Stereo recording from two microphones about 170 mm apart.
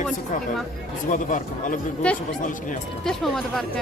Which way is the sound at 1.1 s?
50° left (ahead or behind).